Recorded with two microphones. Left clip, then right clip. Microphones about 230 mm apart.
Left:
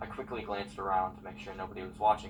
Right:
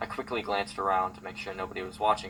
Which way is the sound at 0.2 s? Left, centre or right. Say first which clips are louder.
Right 7 dB; right.